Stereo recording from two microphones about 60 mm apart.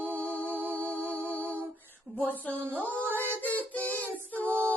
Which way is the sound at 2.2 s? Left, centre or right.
Left.